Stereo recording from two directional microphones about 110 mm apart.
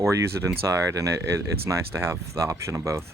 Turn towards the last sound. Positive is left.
turn(degrees=-25)  # may be behind; listen again after turning